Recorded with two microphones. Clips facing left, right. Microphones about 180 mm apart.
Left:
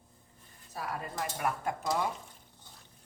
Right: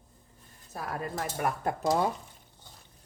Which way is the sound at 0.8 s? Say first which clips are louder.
Right 3 dB; 45° right (ahead or behind).